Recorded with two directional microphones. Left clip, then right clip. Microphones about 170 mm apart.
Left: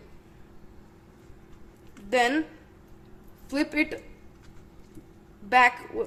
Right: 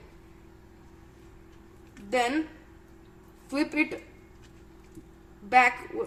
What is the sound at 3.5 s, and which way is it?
Speech, 30° left (ahead or behind).